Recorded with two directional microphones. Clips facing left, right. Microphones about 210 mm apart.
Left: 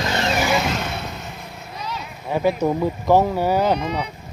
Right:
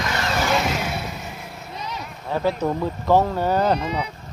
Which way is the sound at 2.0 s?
10° left (ahead or behind).